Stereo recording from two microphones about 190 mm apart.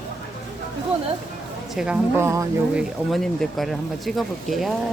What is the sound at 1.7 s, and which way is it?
Speech, 5° right (ahead or behind).